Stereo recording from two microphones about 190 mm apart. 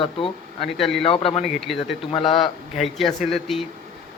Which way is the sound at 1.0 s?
30° left (ahead or behind).